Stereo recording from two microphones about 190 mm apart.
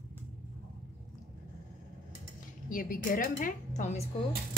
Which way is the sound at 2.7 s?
45° left (ahead or behind).